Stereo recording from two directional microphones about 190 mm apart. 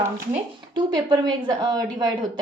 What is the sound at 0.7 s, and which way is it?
Speech, 25° right (ahead or behind).